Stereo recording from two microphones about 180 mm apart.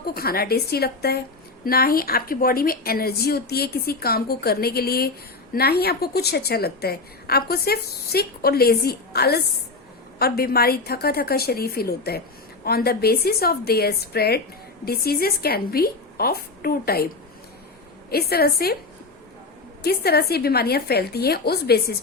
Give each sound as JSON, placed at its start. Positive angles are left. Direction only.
{"t": 0.0, "sound": "a woman's voice", "side_deg": 55}
{"t": 18.1, "sound": "a woman's voice", "side_deg": 60}
{"t": 19.8, "sound": "a woman's voice", "side_deg": 60}